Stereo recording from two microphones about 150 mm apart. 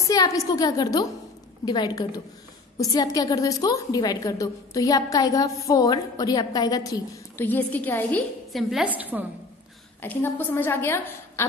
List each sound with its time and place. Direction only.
0.0 s a woman's voice: 25° left (ahead or behind)
7.4 s a woman's voice: 10° left (ahead or behind)
8.5 s a woman's voice: centre (ahead or behind)
10.0 s a woman's voice: 15° left (ahead or behind)